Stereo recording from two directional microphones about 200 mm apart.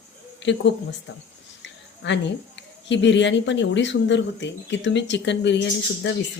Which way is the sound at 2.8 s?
65° left (ahead or behind).